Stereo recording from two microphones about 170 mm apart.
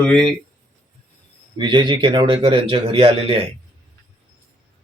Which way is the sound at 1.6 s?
30° right (ahead or behind).